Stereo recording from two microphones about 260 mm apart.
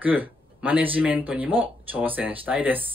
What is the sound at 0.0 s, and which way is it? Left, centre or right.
Speech, centre.